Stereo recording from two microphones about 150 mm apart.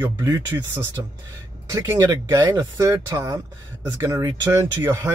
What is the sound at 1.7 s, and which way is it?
Speech, 20° right (ahead or behind).